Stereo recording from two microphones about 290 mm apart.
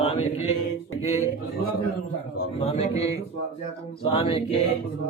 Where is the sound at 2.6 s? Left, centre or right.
Left.